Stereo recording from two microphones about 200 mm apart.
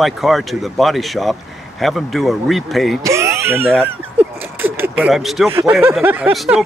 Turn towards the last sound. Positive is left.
turn(degrees=-5)  # may be behind; listen again after turning